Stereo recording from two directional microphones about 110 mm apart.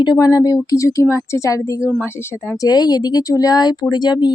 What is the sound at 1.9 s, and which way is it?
Speech, 20° left (ahead or behind).